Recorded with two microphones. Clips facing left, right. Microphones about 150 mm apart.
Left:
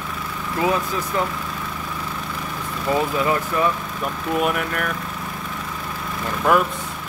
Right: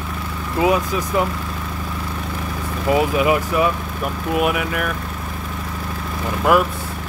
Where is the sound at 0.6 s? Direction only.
15° right (ahead or behind).